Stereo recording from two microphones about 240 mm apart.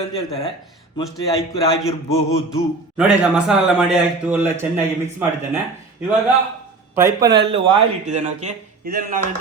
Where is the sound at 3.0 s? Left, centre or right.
Centre.